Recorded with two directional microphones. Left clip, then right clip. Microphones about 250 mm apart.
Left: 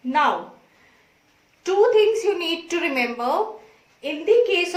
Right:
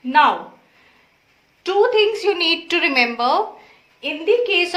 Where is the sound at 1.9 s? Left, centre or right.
Centre.